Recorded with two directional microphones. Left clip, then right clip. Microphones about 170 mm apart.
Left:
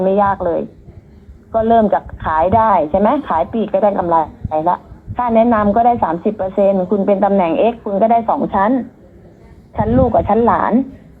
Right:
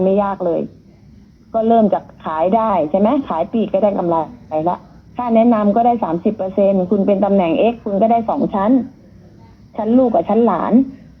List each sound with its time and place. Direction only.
0.0 s a woman's voice: 20° right (ahead or behind)